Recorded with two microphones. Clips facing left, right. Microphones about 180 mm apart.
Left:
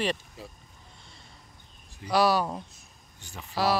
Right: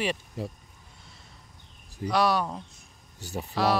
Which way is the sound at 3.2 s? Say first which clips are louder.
Right 10 dB; 40° right (ahead or behind).